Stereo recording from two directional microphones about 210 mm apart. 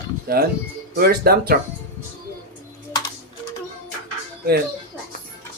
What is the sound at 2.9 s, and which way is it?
Music, 20° left (ahead or behind).